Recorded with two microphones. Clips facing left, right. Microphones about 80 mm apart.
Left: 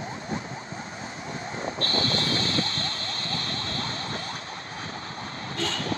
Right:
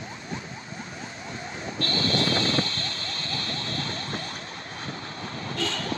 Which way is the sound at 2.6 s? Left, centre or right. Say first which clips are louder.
Left 1 dB; left.